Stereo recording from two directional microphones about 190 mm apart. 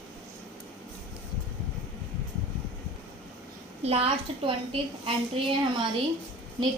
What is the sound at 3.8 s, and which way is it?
A woman's voice, 30° right (ahead or behind).